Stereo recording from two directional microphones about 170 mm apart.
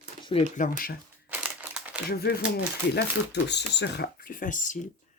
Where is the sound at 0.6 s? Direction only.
55° left (ahead or behind).